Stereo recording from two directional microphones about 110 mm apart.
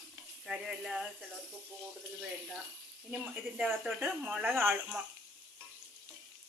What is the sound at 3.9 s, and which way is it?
Speech, 15° right (ahead or behind).